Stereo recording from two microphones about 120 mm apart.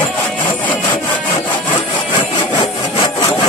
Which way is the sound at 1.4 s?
40° left (ahead or behind).